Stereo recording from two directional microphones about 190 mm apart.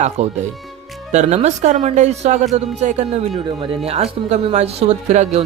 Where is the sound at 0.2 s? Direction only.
35° right (ahead or behind).